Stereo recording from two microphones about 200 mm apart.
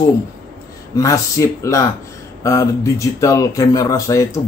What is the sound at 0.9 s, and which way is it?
A man's voice, 15° left (ahead or behind).